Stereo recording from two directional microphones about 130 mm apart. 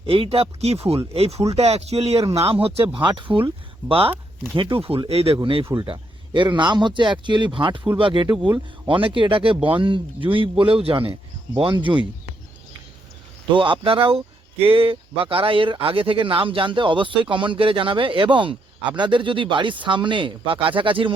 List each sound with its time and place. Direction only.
0.0 s speech: 45° right (ahead or behind)
2.9 s speech: 40° right (ahead or behind)
13.5 s speech: 40° right (ahead or behind)